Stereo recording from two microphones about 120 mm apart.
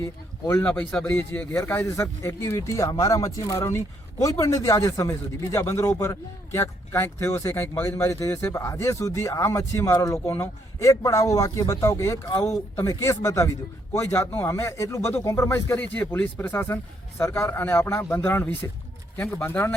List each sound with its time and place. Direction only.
0.0 s speech: 20° left (ahead or behind)